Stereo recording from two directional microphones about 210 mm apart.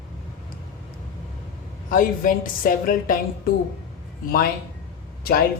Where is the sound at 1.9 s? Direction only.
40° left (ahead or behind).